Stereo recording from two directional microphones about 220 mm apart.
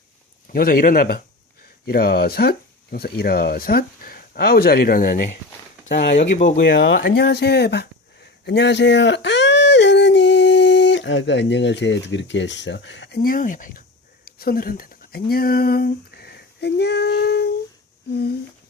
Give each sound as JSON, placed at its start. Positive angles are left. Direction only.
{"t": 0.4, "sound": "speech", "side_deg": 40}
{"t": 14.3, "sound": "a sound", "side_deg": 45}
{"t": 18.1, "sound": "speech", "side_deg": 45}